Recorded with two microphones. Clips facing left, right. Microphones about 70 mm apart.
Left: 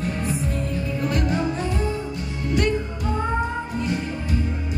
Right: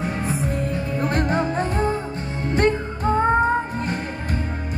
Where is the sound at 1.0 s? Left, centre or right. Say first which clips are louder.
Right 2 dB; right.